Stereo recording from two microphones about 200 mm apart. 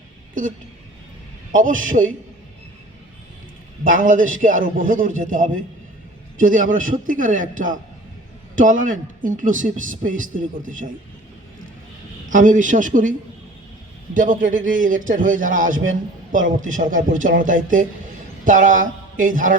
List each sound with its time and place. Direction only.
0.4 s a man's voice: 40° right (ahead or behind)
1.5 s a man's voice: 40° right (ahead or behind)
3.8 s a man's voice: 40° right (ahead or behind)
12.3 s a man's voice: 40° right (ahead or behind)